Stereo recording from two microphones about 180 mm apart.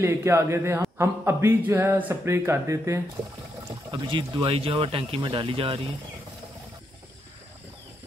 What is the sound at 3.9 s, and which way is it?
Speech, 25° right (ahead or behind).